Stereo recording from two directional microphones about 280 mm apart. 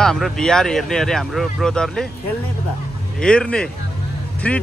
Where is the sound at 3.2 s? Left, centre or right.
Centre.